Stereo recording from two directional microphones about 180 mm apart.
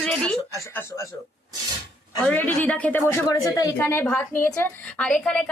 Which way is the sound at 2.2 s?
10° left (ahead or behind).